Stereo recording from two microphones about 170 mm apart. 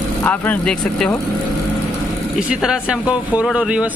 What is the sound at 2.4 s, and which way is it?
Speech, 5° right (ahead or behind).